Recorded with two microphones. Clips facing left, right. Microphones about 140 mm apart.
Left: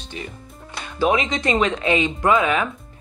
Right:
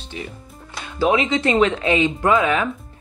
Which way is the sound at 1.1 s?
15° left (ahead or behind).